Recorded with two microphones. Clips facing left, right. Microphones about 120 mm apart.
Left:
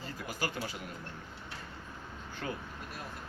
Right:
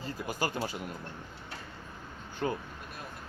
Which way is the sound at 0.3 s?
30° right (ahead or behind).